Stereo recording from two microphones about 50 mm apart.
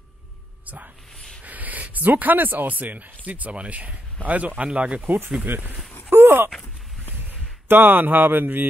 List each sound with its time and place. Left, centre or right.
1.4 s speech: right
5.0 s speech: right
6.0 s groan: right
7.2 s speech: right